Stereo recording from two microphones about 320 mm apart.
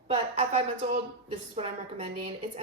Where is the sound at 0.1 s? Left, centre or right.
Right.